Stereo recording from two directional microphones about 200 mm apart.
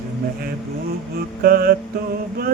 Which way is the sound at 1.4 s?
45° right (ahead or behind).